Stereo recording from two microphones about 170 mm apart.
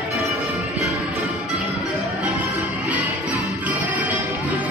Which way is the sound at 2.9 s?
10° right (ahead or behind).